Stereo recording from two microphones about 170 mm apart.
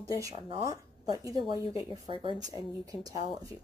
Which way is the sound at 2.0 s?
25° right (ahead or behind).